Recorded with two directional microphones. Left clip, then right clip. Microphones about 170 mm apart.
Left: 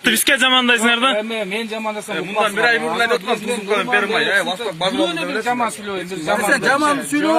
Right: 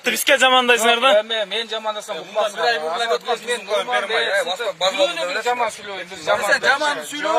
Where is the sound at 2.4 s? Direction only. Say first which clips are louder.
Left 3 dB; 15° left (ahead or behind).